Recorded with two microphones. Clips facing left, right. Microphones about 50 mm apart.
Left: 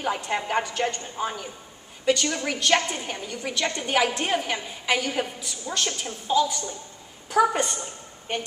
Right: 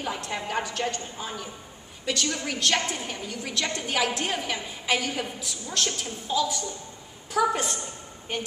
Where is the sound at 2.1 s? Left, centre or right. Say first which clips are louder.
Left 5 dB; centre.